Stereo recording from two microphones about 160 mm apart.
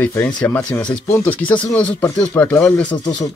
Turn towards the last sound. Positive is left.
turn(degrees=5)  # may be behind; listen again after turning